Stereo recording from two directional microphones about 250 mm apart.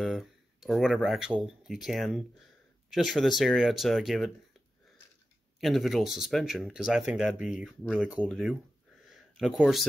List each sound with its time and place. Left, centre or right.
0.0 s speech: centre
5.6 s speech: centre